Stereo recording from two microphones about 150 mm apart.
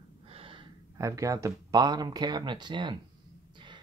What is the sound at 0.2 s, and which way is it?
Gasp, 40° right (ahead or behind).